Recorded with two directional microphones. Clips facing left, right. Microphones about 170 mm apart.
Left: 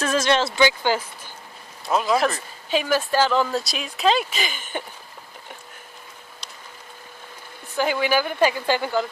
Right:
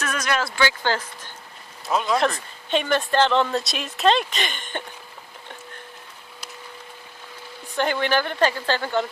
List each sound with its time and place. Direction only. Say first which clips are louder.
0.0 s speech: left 5 dB; 30° left (ahead or behind); by 4.8 s 5° left (ahead or behind)
7.8 s speech: left 1 dB; 5° left (ahead or behind)